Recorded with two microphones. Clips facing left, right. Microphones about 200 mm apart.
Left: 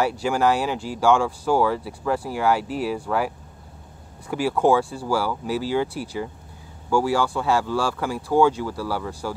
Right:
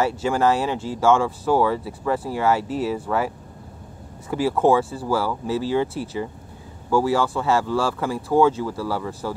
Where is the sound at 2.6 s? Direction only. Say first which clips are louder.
Right 2 dB; 25° right (ahead or behind).